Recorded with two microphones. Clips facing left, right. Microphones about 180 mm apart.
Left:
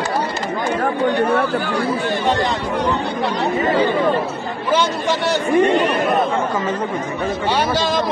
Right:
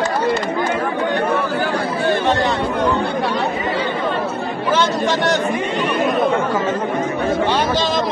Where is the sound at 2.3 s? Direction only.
15° left (ahead or behind).